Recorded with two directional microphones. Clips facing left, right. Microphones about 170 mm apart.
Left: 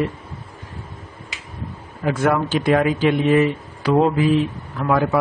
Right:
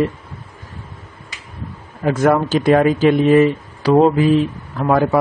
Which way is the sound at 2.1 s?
40° right (ahead or behind).